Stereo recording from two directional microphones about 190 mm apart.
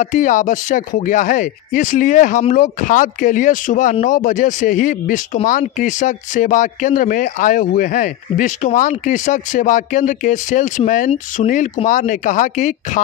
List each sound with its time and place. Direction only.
0.0 s speech: 40° left (ahead or behind)